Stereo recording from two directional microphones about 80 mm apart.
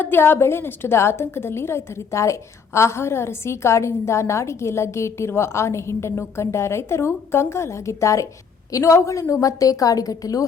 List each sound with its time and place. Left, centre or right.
0.0 s a woman's voice: left